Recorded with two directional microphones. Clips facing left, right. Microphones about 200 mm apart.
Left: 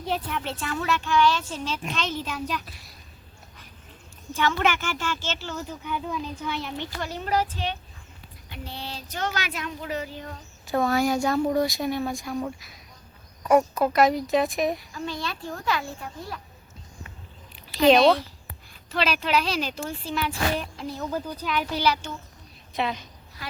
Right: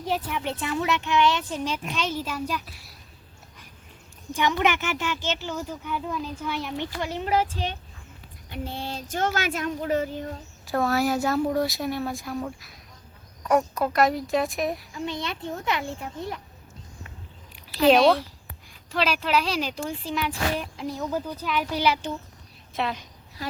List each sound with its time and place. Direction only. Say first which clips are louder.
0.0 s speech: right 1 dB; 10° right (ahead or behind)
0.5 s a child's voice: right 2 dB; 20° right (ahead or behind)
4.3 s speech: right 1 dB; 15° right (ahead or behind)
7.0 s a child's voice: right 1 dB; 20° right (ahead or behind)
8.4 s speech: right 4 dB; 50° right (ahead or behind)
10.7 s speech: left 1 dB; centre (ahead or behind)
14.9 s a child's voice: right 1 dB; 20° right (ahead or behind)
17.5 s speech: left 1 dB; 5° right (ahead or behind)
23.4 s speech: right 6 dB; 40° right (ahead or behind)